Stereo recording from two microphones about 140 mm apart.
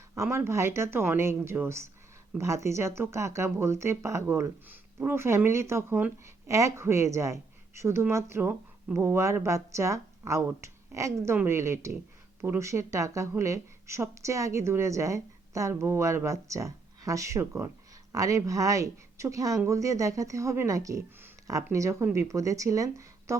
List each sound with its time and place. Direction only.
0.2 s speech: 20° right (ahead or behind)